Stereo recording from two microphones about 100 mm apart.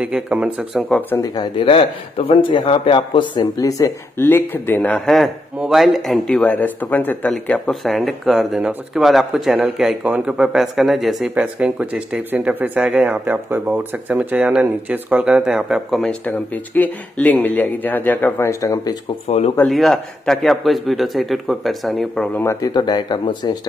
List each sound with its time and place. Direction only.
0.0 s speech: 10° right (ahead or behind)
1.1 s speech: 35° left (ahead or behind)
1.4 s speech: 60° left (ahead or behind)
3.5 s speech: 35° left (ahead or behind)
4.3 s speech: 20° left (ahead or behind)
4.9 s speech: 5° left (ahead or behind)
11.3 s speech: 10° right (ahead or behind)
16.0 s speech: 10° left (ahead or behind); by 18.9 s 30° left (ahead or behind)
19.2 s speech: 90° left
19.7 s speech: 5° left (ahead or behind)
22.4 s speech: 30° left (ahead or behind)
22.7 s speech: 45° left (ahead or behind)